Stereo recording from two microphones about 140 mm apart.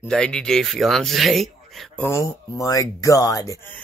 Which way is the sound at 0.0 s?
5° left (ahead or behind).